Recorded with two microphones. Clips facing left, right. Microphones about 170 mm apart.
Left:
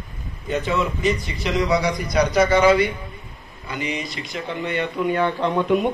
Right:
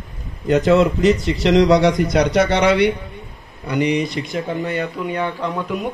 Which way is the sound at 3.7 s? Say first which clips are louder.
Right 9 dB; 65° right (ahead or behind).